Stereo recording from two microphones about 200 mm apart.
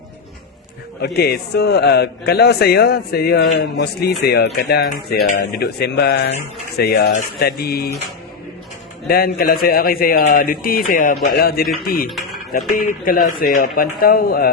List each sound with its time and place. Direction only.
1.0 s a man's voice: 50° left (ahead or behind)
9.0 s a man's voice: 50° left (ahead or behind)
12.0 s music: centre (ahead or behind)
12.7 s a man's voice: 45° left (ahead or behind)